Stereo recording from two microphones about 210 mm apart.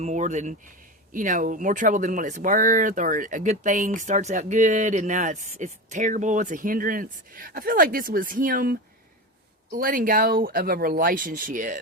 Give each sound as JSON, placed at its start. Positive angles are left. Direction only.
{"t": 0.0, "sound": "speech", "side_deg": -35}